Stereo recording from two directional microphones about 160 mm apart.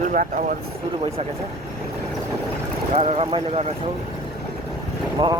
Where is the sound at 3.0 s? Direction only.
40° right (ahead or behind).